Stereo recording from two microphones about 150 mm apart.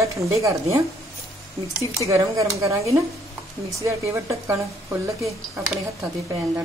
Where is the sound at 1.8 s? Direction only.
20° right (ahead or behind).